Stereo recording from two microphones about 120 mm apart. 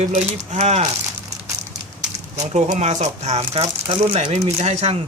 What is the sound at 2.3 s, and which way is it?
Speech, 70° right (ahead or behind).